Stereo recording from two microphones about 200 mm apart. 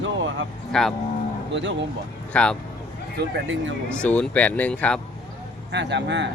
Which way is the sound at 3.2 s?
60° right (ahead or behind).